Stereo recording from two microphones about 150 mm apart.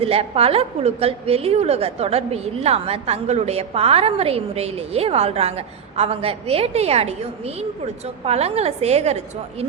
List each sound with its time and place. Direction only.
0.0 s a woman's voice: 40° right (ahead or behind)